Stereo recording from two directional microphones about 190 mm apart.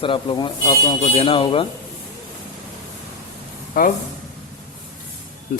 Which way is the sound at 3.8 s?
50° left (ahead or behind).